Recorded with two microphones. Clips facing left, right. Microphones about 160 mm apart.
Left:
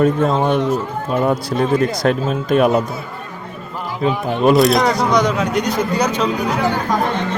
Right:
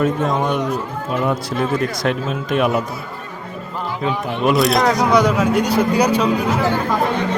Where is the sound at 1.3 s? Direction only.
35° left (ahead or behind).